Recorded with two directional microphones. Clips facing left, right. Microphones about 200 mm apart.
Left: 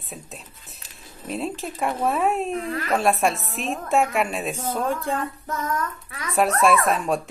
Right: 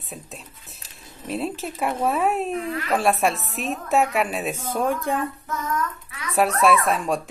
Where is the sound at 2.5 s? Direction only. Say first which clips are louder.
Even; 40° left (ahead or behind).